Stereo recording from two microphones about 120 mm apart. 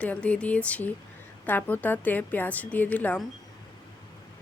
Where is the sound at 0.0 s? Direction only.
10° left (ahead or behind).